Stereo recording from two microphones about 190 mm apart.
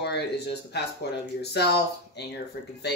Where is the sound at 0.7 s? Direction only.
60° left (ahead or behind).